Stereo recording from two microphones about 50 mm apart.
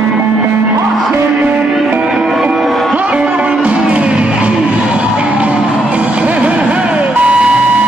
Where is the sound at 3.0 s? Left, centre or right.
Right.